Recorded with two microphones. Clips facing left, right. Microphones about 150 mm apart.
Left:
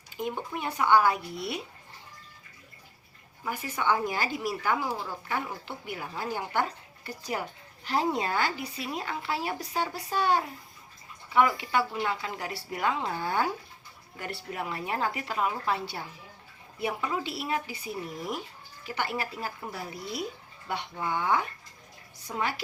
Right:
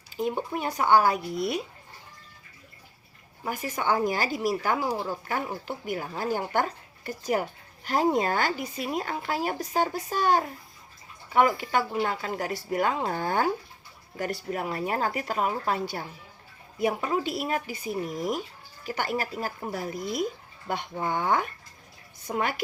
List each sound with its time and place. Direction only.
0.2 s speech: 35° right (ahead or behind)
3.4 s speech: 40° right (ahead or behind)
18.9 s speech: 40° right (ahead or behind)